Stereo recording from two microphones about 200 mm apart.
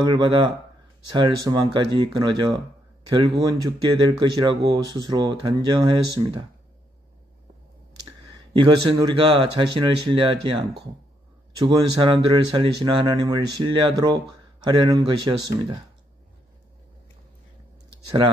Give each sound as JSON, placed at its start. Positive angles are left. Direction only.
{"t": 0.0, "sound": "speech", "side_deg": -20}
{"t": 8.5, "sound": "speech", "side_deg": -20}
{"t": 11.6, "sound": "speech", "side_deg": -25}